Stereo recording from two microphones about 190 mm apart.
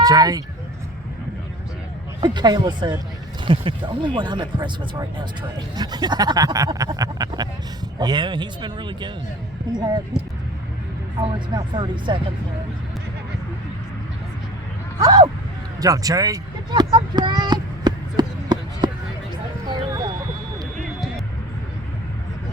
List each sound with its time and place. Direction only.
0.0 s speech: 20° right (ahead or behind)
2.2 s speech: 20° right (ahead or behind)
11.2 s speech: 25° right (ahead or behind)
15.0 s speech: 20° right (ahead or behind)
15.8 s a sound: 20° right (ahead or behind)